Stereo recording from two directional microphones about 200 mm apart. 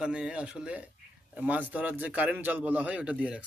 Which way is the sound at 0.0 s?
5° right (ahead or behind).